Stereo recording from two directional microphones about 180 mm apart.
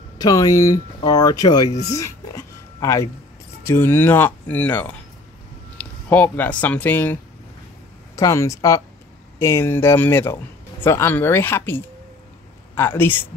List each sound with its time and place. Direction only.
0.2 s speech: 20° left (ahead or behind)
1.7 s speech: 40° left (ahead or behind)
2.0 s a sound: 20° left (ahead or behind)
3.6 s speech: 15° left (ahead or behind)
6.0 s speech: 10° left (ahead or behind)
8.2 s speech: 15° left (ahead or behind)